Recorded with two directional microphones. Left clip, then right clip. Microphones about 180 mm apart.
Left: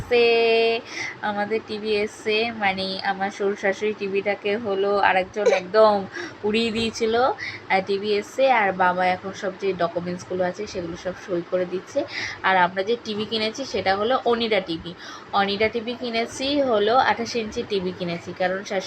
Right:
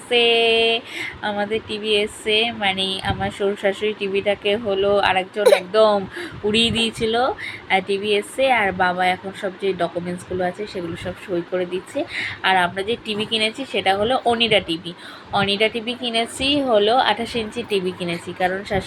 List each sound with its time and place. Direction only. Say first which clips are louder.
0.1 s speech: right 2 dB; 10° right (ahead or behind)
5.4 s speech: right 8 dB; 50° right (ahead or behind)
5.7 s speech: right 1 dB; 5° right (ahead or behind)
11.5 s speech: left 2 dB; 10° right (ahead or behind)